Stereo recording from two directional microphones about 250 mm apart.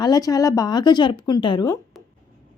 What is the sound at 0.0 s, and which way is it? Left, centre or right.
A woman's voice, centre.